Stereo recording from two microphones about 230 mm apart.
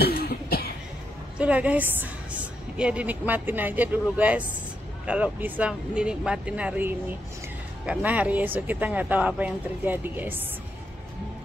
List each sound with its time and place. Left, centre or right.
0.0 s cough: left
1.4 s a woman's voice: centre